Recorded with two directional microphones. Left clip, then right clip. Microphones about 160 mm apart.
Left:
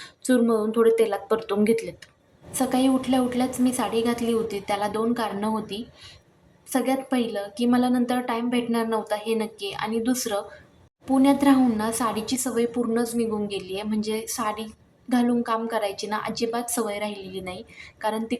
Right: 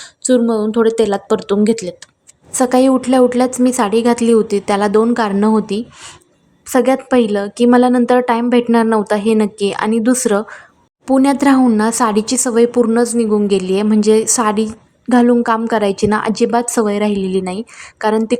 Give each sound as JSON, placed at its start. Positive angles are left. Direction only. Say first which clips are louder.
{"t": 0.0, "sound": "speech", "louder": "right 9 dB", "side_deg": -30}
{"t": 2.5, "sound": "speech", "louder": "right 11 dB", "side_deg": -55}